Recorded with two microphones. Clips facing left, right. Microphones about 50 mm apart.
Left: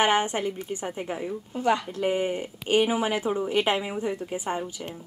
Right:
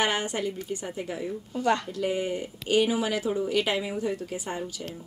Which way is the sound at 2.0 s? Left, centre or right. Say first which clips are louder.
Left 2 dB; left.